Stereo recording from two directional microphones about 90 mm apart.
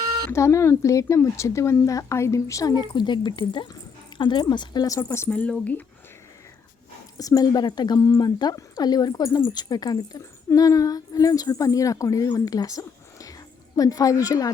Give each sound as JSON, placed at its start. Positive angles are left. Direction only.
{"t": 0.3, "sound": "speech", "side_deg": 30}
{"t": 2.7, "sound": "speech", "side_deg": 55}
{"t": 4.9, "sound": "speech", "side_deg": 30}
{"t": 5.3, "sound": "speech", "side_deg": 15}
{"t": 7.2, "sound": "speech", "side_deg": 45}
{"t": 7.9, "sound": "speech", "side_deg": 40}